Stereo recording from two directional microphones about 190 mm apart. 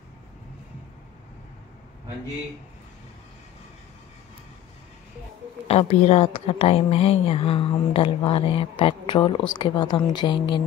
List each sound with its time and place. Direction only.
5.7 s a woman's voice: 35° left (ahead or behind)